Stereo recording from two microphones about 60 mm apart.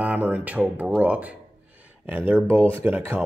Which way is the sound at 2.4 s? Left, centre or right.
Right.